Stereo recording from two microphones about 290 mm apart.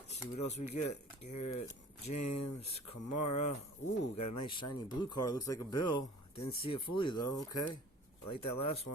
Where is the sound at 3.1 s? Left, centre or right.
Left.